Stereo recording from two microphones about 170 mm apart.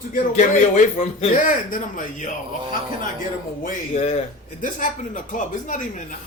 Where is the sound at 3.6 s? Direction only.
40° left (ahead or behind).